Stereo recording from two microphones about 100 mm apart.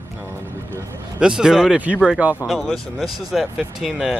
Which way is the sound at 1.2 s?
5° right (ahead or behind).